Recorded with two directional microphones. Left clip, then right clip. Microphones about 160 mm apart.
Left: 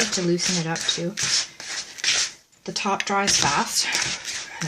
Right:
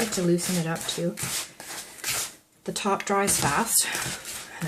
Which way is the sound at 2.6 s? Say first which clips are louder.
Left 2 dB; 15° left (ahead or behind).